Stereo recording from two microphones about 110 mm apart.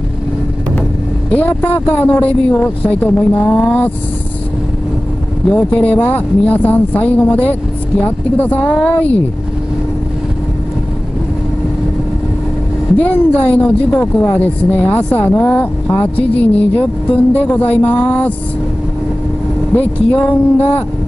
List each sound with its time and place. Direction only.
1.3 s speech: 15° left (ahead or behind)
5.5 s speech: 10° left (ahead or behind)
12.9 s speech: 15° left (ahead or behind)
17.8 s a sound: 50° left (ahead or behind)
19.7 s speech: 15° left (ahead or behind)